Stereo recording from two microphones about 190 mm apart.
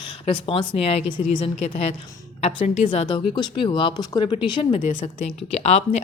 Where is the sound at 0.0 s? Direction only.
25° left (ahead or behind).